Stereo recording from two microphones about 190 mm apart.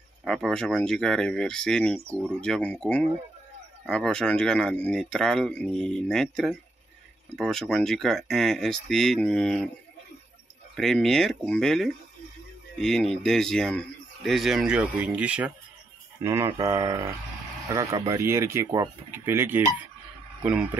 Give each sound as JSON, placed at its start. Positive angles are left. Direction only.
{"t": 0.2, "sound": "speech", "side_deg": 5}
{"t": 10.8, "sound": "speech", "side_deg": 0}